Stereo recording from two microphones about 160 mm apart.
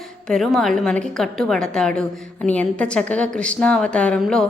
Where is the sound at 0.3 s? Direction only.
Centre (ahead or behind).